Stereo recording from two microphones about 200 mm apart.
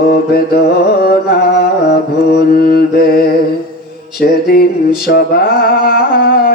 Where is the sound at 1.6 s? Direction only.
50° left (ahead or behind).